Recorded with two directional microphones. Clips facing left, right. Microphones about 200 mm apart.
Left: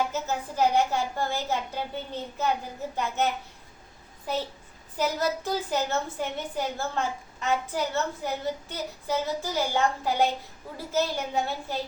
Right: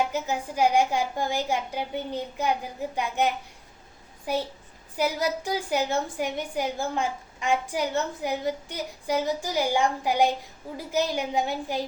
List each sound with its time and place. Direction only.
0.1 s a woman's voice: 15° right (ahead or behind)